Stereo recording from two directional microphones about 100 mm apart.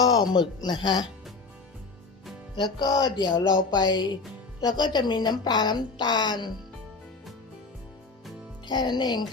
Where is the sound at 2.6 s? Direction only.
40° left (ahead or behind).